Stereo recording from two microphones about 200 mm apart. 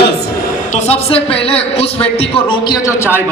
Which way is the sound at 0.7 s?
30° left (ahead or behind).